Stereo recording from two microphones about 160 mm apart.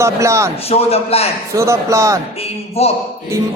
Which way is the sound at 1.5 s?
20° right (ahead or behind).